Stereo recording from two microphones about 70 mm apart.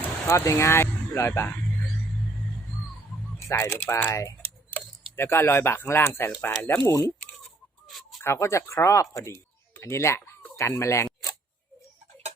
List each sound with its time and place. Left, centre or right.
0.3 s speech: left
3.4 s speech: left
5.1 s speech: left
6.8 s speech: left
8.2 s speech: left
10.2 s chicken: left
10.6 s speech: left